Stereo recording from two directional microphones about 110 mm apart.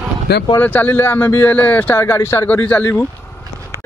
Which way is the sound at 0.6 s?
15° left (ahead or behind).